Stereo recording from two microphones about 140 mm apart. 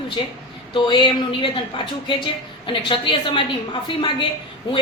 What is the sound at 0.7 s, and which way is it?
Speech, 35° left (ahead or behind).